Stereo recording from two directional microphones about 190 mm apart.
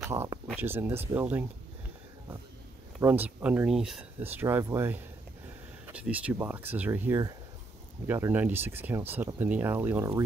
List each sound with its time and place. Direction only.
0.0 s speech: 15° right (ahead or behind)
3.0 s speech: 10° right (ahead or behind)